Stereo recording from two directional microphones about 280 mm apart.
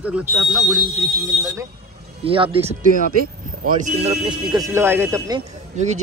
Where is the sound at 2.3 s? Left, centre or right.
Centre.